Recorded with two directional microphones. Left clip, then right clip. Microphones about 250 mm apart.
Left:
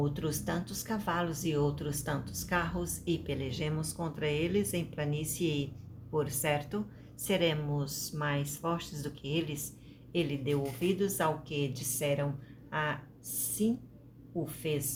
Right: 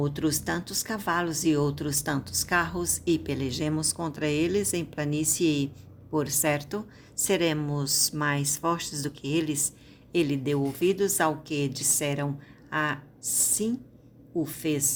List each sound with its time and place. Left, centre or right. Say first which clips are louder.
0.0 s speech: right 7 dB; right